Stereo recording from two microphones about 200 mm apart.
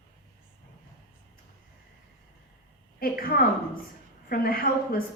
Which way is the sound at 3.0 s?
45° left (ahead or behind).